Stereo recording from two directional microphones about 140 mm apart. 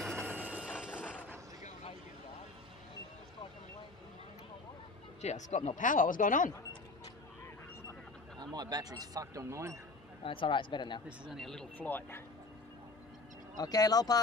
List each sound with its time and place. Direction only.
0.0 s a sound: centre (ahead or behind)
5.2 s speech: 55° left (ahead or behind); by 6.5 s 70° left (ahead or behind)
8.4 s speech: 30° right (ahead or behind)
10.2 s speech: 35° left (ahead or behind)
11.1 s speech: 5° right (ahead or behind)
13.6 s speech: 25° left (ahead or behind)